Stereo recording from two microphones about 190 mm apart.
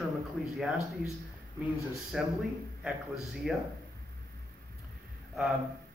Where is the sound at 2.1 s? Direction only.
Centre (ahead or behind).